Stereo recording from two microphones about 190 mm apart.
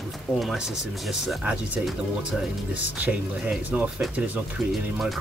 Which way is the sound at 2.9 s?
10° right (ahead or behind).